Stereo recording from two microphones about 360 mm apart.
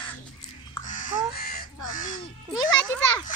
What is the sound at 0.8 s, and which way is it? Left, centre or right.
Crow, left.